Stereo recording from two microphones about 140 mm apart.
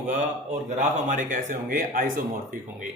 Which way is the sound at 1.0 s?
65° right (ahead or behind).